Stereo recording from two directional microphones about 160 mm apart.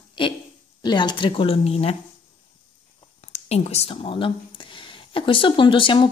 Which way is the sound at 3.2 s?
45° left (ahead or behind).